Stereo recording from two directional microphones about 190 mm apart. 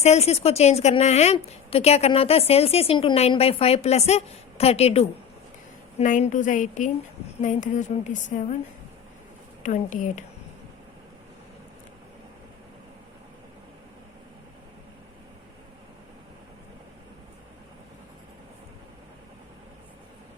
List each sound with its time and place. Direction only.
0.0 s a woman's voice: 35° left (ahead or behind)
9.6 s a woman's voice: 40° left (ahead or behind)